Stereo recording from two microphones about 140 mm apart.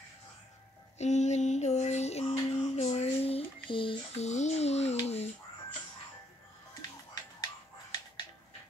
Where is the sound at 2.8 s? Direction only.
50° left (ahead or behind).